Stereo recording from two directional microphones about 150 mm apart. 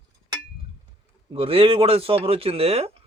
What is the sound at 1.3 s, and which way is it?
Speech, 40° right (ahead or behind).